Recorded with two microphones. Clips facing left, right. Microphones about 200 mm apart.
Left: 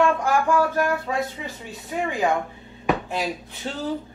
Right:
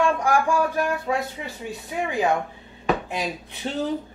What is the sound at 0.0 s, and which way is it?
Speech, 15° right (ahead or behind).